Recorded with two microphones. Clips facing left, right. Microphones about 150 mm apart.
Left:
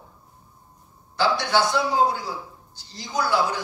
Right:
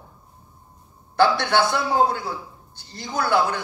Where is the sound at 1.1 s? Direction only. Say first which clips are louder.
Right 3 dB; 60° right (ahead or behind).